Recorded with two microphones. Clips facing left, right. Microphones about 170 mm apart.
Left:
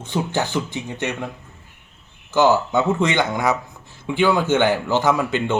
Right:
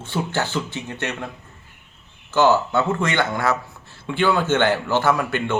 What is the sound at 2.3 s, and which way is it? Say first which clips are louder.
Speech: left 1 dB; 15° left (ahead or behind).